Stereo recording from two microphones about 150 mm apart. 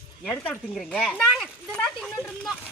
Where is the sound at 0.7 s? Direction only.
Centre (ahead or behind).